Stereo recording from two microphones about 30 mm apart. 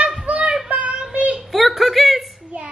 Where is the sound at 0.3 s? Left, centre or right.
Right.